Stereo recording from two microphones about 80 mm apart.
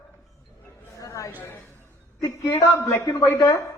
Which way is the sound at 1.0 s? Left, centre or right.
Left.